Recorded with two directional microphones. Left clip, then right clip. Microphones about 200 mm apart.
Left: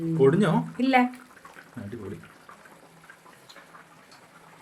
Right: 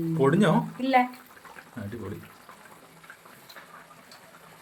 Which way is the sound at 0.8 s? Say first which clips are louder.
Left 2 dB; 55° left (ahead or behind).